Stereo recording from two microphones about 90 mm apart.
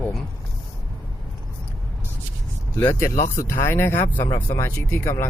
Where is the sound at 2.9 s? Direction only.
30° left (ahead or behind).